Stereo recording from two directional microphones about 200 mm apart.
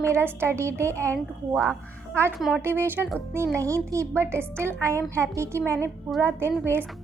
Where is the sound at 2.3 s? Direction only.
Centre (ahead or behind).